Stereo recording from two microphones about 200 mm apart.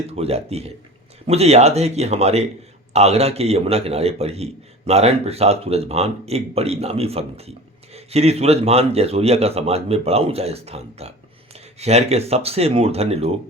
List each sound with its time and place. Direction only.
0.1 s speech: 30° right (ahead or behind)